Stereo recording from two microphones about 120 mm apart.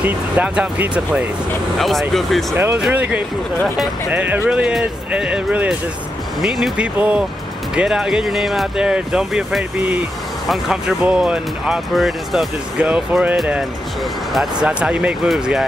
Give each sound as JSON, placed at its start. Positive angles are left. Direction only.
{"t": 0.0, "sound": "speech", "side_deg": -10}
{"t": 1.8, "sound": "speech", "side_deg": 0}
{"t": 2.5, "sound": "speech", "side_deg": -20}
{"t": 3.6, "sound": "speech", "side_deg": 0}
{"t": 4.1, "sound": "speech", "side_deg": -15}